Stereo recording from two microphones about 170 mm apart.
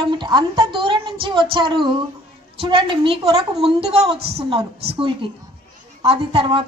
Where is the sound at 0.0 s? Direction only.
25° right (ahead or behind).